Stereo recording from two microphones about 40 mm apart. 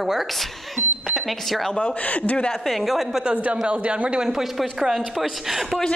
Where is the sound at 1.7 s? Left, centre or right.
Left.